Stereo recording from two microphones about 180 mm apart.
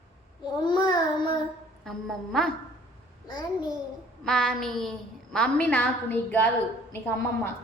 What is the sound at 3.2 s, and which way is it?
Speech, 25° left (ahead or behind).